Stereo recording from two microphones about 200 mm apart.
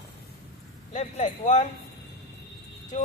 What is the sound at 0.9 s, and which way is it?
Speech, 35° left (ahead or behind).